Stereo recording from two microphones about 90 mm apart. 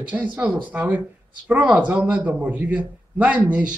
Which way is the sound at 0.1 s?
15° right (ahead or behind).